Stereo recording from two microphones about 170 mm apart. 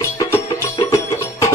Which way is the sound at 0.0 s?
20° left (ahead or behind).